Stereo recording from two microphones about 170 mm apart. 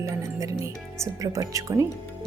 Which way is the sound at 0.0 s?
20° right (ahead or behind).